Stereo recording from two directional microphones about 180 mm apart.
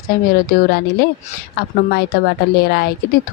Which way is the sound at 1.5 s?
65° left (ahead or behind).